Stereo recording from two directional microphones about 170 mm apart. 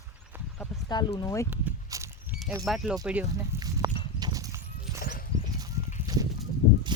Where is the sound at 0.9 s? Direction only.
25° left (ahead or behind).